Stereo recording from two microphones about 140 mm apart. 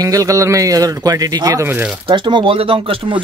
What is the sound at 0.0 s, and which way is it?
A man's voice, 25° right (ahead or behind).